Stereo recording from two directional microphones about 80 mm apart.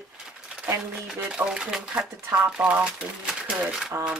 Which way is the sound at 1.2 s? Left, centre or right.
Centre.